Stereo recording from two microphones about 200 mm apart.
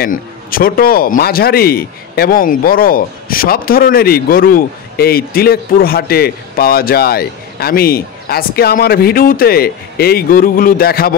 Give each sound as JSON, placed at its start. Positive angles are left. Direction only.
{"t": 0.0, "sound": "speech", "side_deg": 45}